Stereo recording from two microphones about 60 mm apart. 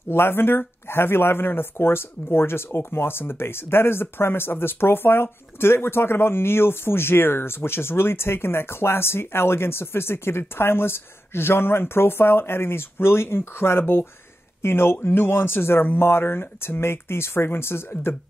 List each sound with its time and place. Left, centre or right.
0.1 s speech: left